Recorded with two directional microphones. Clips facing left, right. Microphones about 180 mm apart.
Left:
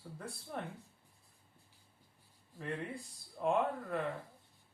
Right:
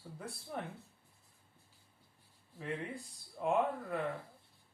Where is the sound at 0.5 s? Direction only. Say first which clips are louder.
Even; centre (ahead or behind).